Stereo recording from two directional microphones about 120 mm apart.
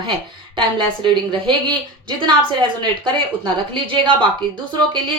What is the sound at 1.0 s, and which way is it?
A woman's voice, 40° right (ahead or behind).